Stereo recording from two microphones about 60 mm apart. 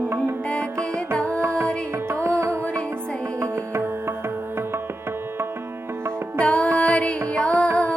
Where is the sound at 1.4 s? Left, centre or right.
Right.